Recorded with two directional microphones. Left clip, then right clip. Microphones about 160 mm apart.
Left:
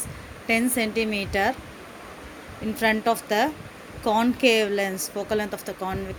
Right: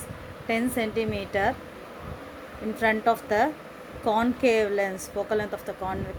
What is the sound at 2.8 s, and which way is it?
Speech, 30° left (ahead or behind).